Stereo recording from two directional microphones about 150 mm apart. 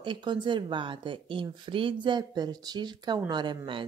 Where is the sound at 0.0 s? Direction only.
30° right (ahead or behind).